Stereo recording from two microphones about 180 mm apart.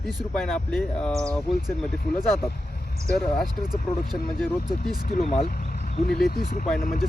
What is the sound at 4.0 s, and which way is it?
Speech, 55° left (ahead or behind).